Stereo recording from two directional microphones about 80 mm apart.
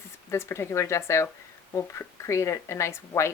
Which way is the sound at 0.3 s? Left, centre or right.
Left.